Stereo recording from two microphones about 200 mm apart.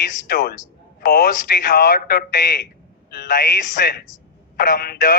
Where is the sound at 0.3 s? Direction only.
50° left (ahead or behind).